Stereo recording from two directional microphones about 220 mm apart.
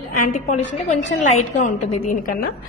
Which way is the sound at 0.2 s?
35° left (ahead or behind).